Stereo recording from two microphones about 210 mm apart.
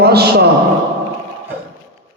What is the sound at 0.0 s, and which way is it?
Speech, 50° right (ahead or behind).